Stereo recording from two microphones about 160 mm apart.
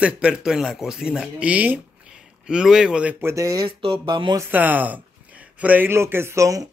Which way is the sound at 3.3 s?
20° right (ahead or behind).